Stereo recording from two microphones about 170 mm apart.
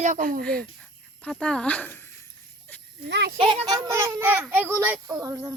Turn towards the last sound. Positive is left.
turn(degrees=-20)  # may be behind; listen again after turning